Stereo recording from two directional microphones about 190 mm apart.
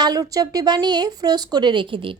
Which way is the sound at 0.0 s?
20° right (ahead or behind).